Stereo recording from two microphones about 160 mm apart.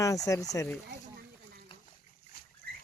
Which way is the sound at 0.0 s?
20° left (ahead or behind).